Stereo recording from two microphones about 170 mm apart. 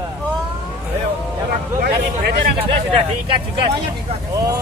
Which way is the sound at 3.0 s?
30° right (ahead or behind).